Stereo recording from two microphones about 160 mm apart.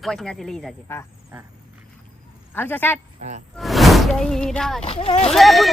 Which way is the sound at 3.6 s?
Centre (ahead or behind).